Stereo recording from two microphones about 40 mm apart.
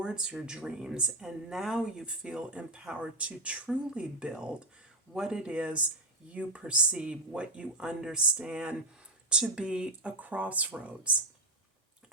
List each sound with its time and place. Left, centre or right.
0.0 s speech: right
1.3 s speech: centre
2.0 s speech: right
3.2 s speech: right
5.1 s speech: centre
5.4 s speech: right
10.2 s speech: right